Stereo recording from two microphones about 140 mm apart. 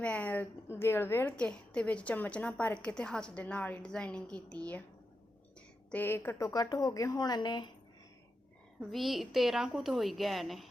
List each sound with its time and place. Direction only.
0.0 s a woman's voice: 10° left (ahead or behind); by 7.7 s 30° left (ahead or behind)
8.9 s a woman's voice: centre (ahead or behind)